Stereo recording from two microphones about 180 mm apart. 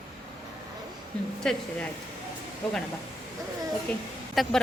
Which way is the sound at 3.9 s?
5° left (ahead or behind).